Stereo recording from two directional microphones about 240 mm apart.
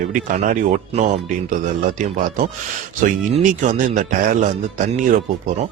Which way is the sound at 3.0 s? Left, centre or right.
Right.